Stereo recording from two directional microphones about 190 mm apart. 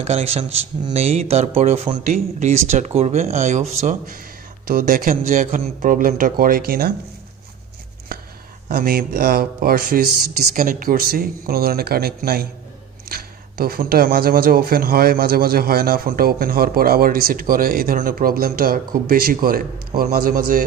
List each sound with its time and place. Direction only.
0.0 s speech: 35° right (ahead or behind); by 6.9 s 50° right (ahead or behind)
8.1 s a sound: 50° right (ahead or behind)
8.6 s speech: 50° right (ahead or behind)